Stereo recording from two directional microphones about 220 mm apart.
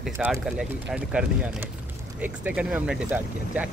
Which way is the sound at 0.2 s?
5° right (ahead or behind).